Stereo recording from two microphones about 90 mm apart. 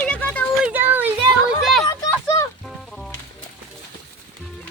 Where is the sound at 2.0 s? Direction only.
35° left (ahead or behind).